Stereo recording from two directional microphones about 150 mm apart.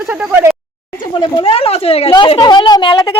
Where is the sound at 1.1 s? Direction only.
30° left (ahead or behind).